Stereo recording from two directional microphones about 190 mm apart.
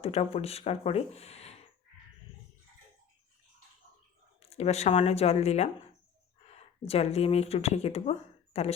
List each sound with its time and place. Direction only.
0.0 s speech: 35° left (ahead or behind)
4.4 s speech: 35° left (ahead or behind)